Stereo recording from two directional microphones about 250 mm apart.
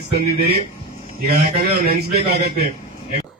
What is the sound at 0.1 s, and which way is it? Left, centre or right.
A man's voice, right.